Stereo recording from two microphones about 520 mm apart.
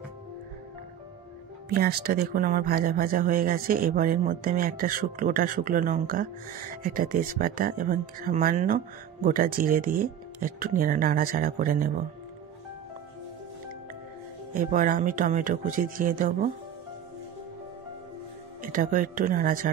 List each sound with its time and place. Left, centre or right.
1.7 s speech: centre
14.5 s speech: centre
18.6 s speech: centre